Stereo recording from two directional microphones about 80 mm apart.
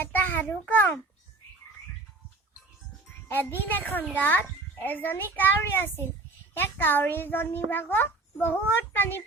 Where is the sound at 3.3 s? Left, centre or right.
Left.